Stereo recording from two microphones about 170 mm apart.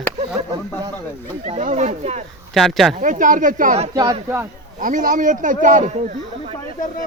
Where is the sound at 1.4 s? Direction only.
45° right (ahead or behind).